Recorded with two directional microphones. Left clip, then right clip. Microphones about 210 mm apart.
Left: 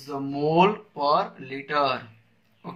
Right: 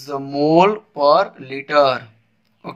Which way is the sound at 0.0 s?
50° right (ahead or behind).